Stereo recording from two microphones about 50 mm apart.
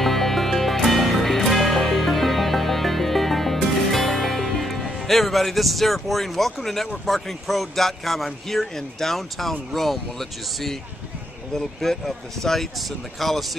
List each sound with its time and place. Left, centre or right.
0.0 s music: centre
7.1 s speech: centre